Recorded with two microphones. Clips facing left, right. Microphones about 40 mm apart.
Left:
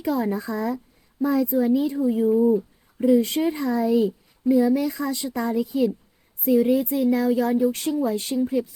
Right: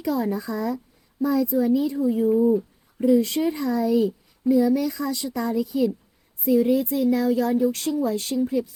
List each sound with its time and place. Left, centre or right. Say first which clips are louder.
0.0 s speech: left 1 dB; left
2.0 s speech: even; left
2.4 s speech: even; centre
3.2 s speech: even; left
6.4 s speech: even; left
8.4 s speech: even; centre